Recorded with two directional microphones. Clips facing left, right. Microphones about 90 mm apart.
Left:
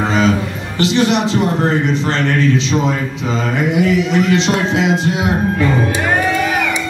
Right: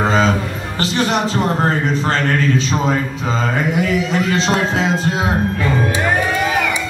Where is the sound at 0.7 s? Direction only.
40° right (ahead or behind).